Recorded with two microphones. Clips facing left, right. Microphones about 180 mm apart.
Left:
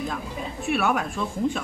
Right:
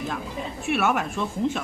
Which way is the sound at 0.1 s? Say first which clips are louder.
Right 1 dB; centre (ahead or behind).